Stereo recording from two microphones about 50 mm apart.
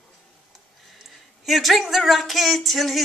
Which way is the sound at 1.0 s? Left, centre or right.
Centre.